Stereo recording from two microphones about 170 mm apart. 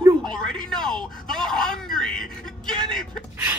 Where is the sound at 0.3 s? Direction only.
5° left (ahead or behind).